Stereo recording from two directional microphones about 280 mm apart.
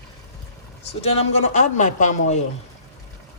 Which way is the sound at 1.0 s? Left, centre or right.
Left.